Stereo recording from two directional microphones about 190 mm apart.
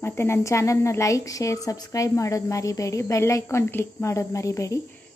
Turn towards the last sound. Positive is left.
turn(degrees=15)  # may be behind; listen again after turning